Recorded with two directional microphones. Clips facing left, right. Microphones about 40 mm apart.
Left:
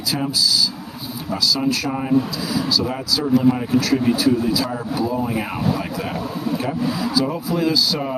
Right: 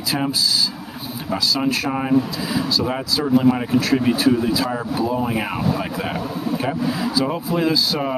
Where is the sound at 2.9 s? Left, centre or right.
Right.